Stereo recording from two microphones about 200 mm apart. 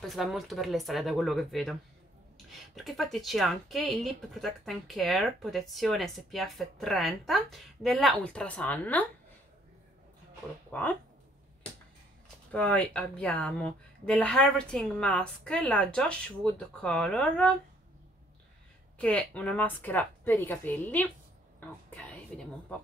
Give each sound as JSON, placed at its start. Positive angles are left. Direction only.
{"t": 0.0, "sound": "speech", "side_deg": 0}
{"t": 10.7, "sound": "speech", "side_deg": 10}
{"t": 12.5, "sound": "speech", "side_deg": 5}
{"t": 18.9, "sound": "a woman's voice", "side_deg": 5}